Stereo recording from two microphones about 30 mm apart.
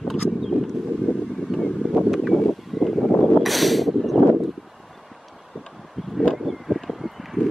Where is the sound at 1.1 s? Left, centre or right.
Right.